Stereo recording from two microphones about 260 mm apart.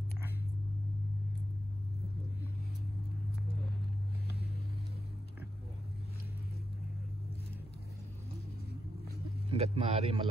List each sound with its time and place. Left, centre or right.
9.5 s speech: right